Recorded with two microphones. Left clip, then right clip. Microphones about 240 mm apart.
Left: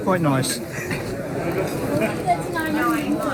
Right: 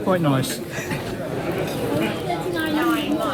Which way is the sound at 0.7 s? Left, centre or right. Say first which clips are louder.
Even; right.